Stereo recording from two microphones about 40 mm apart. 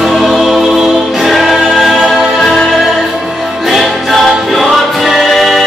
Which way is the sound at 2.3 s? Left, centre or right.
Centre.